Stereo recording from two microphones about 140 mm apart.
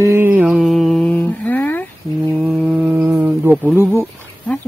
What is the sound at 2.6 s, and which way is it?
Mantra, 10° right (ahead or behind).